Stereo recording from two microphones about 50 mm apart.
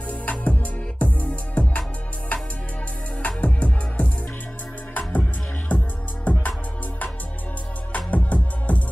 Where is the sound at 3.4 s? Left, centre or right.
Left.